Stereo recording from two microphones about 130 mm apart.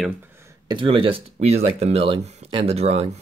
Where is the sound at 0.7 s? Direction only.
40° right (ahead or behind).